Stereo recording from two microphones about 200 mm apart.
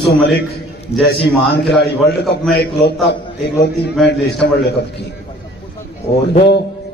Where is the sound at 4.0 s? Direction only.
55° left (ahead or behind).